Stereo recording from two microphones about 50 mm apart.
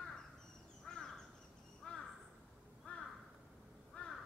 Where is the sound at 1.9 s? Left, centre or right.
Left.